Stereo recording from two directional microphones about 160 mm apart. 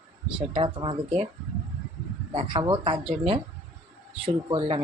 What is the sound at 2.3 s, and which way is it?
Speech, 35° right (ahead or behind).